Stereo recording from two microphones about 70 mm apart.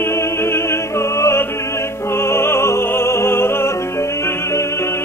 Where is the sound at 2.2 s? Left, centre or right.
Left.